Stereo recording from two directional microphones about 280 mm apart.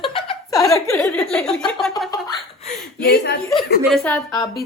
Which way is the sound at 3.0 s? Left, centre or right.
Left.